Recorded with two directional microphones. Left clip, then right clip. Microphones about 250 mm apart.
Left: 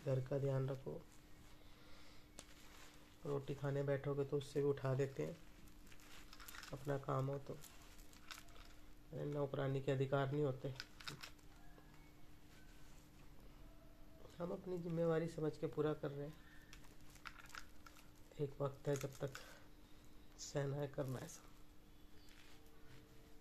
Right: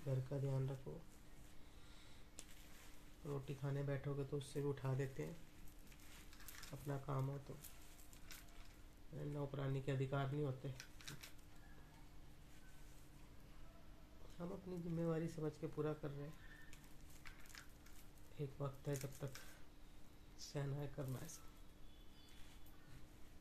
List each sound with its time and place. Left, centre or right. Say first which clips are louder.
0.1 s speech: left 6 dB; centre
3.3 s speech: left 5 dB; centre
6.7 s speech: left 6 dB; centre
9.2 s speech: left 6 dB; centre
10.8 s typing: left 4 dB; left
14.4 s speech: left 5 dB; centre
18.4 s speech: left 6 dB; centre
20.3 s speech: left 6 dB; centre